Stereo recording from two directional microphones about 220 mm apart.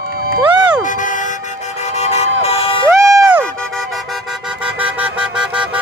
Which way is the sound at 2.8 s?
10° right (ahead or behind).